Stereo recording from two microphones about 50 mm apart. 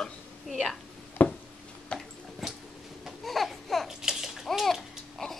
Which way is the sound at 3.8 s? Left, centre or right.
Centre.